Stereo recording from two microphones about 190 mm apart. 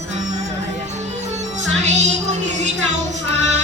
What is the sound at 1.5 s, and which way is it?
Music, 40° right (ahead or behind).